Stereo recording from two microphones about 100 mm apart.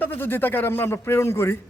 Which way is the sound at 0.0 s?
20° left (ahead or behind).